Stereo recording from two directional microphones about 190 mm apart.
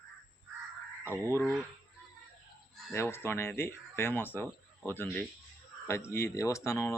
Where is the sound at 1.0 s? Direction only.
10° right (ahead or behind).